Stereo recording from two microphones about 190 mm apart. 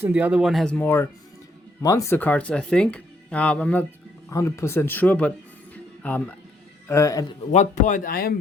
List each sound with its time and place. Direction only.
0.0 s speech: 10° right (ahead or behind); by 5.3 s 10° left (ahead or behind)
5.7 s music: 10° left (ahead or behind)
6.8 s speech: 15° left (ahead or behind)
7.5 s speech: 40° left (ahead or behind)